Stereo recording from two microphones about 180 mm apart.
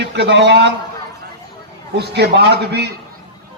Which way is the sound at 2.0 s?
65° right (ahead or behind).